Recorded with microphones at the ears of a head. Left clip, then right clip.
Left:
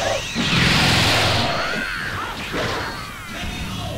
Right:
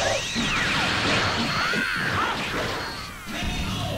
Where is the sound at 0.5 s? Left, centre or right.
Left.